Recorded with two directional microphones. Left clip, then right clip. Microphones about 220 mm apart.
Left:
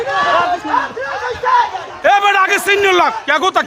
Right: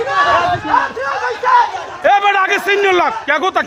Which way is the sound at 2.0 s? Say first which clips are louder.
Left 1 dB; 5° left (ahead or behind).